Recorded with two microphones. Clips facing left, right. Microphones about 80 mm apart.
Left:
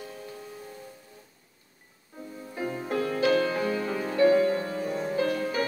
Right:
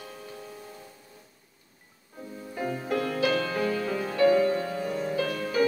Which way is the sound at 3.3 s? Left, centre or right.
Centre.